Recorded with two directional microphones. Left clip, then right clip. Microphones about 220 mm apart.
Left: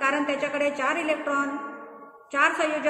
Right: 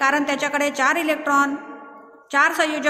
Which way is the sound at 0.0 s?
50° right (ahead or behind).